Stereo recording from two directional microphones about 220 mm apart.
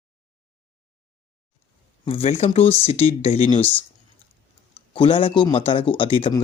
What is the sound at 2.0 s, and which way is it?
Speech, 25° left (ahead or behind).